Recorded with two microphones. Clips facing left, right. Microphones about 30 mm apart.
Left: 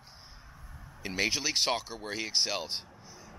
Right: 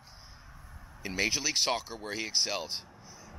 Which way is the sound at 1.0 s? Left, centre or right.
Centre.